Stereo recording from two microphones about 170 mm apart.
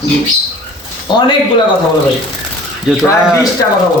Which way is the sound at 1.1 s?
25° left (ahead or behind).